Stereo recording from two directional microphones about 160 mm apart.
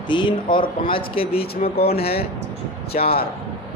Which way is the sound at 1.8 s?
75° left (ahead or behind).